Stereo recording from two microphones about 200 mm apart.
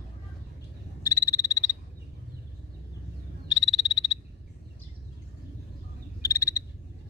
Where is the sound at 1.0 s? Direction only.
15° left (ahead or behind).